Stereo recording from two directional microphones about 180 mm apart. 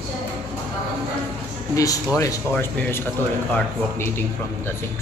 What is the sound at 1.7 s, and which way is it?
Speech, 20° left (ahead or behind).